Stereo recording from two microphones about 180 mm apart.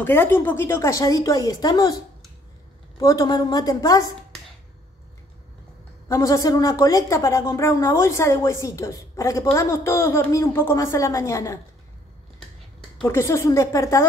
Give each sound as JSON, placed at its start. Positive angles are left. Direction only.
{"t": 0.0, "sound": "speech", "side_deg": 10}
{"t": 3.0, "sound": "a woman's voice", "side_deg": 20}
{"t": 6.0, "sound": "speech", "side_deg": 15}
{"t": 12.9, "sound": "speech", "side_deg": 10}